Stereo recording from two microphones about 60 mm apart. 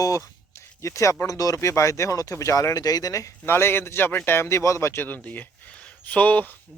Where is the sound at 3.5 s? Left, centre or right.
Left.